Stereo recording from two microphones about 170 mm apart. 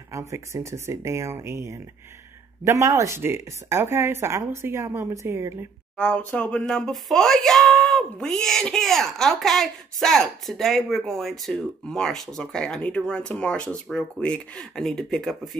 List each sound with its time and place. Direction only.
0.1 s speech: 15° right (ahead or behind)
5.9 s speech: 5° left (ahead or behind)